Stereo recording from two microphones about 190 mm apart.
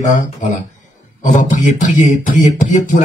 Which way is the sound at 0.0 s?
40° left (ahead or behind).